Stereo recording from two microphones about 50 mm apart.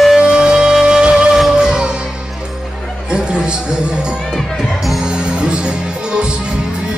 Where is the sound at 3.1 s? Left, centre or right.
Centre.